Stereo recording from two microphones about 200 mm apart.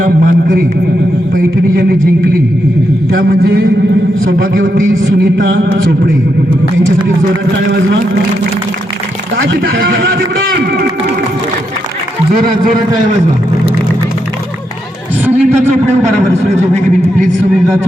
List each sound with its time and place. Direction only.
0.0 s a man's voice: 45° right (ahead or behind)
3.1 s a man's voice: 50° right (ahead or behind)
9.4 s a man's voice: 60° right (ahead or behind)
15.2 s a sound: 10° right (ahead or behind)